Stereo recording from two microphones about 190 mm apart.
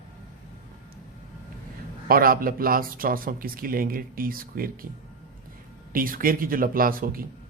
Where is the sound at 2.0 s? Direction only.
50° right (ahead or behind).